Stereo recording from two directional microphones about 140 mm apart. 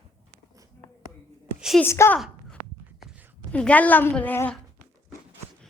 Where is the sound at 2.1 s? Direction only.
5° left (ahead or behind).